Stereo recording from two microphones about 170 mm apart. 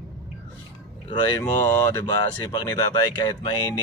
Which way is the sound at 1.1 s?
25° left (ahead or behind).